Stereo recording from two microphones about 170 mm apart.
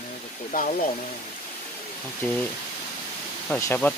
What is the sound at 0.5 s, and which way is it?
Speech, 60° left (ahead or behind).